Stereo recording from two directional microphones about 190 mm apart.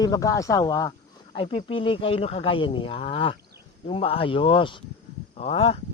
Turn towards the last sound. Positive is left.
turn(degrees=30)  # may be behind; listen again after turning